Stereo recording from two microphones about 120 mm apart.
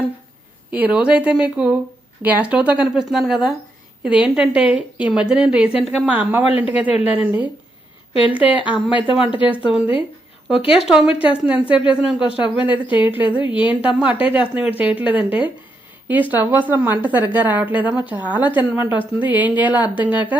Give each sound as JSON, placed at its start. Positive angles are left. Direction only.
{"t": 0.7, "sound": "a woman's voice", "side_deg": -10}
{"t": 8.1, "sound": "speech", "side_deg": 45}
{"t": 9.1, "sound": "a woman's voice", "side_deg": -5}
{"t": 13.4, "sound": "speech", "side_deg": 45}
{"t": 13.7, "sound": "a woman's voice", "side_deg": -10}